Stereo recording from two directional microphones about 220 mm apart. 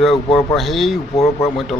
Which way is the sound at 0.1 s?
25° left (ahead or behind).